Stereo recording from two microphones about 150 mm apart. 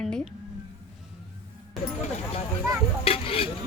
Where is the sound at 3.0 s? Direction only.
40° left (ahead or behind).